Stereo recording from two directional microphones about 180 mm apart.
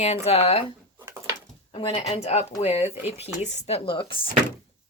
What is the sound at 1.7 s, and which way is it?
Speech, 30° left (ahead or behind).